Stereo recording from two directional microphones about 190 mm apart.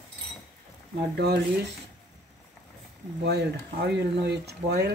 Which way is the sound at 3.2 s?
60° right (ahead or behind).